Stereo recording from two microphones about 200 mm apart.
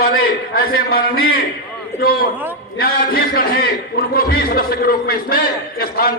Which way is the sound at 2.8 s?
50° left (ahead or behind).